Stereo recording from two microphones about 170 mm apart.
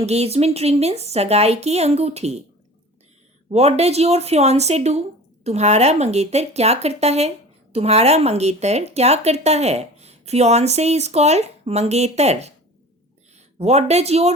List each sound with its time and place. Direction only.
0.0 s speech: 40° right (ahead or behind)
3.5 s speech: 40° right (ahead or behind)
13.6 s speech: 40° right (ahead or behind)